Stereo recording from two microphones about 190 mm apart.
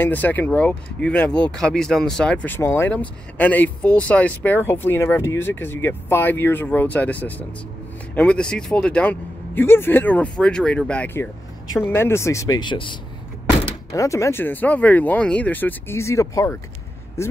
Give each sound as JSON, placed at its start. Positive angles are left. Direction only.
{"t": 0.0, "sound": "speech", "side_deg": 10}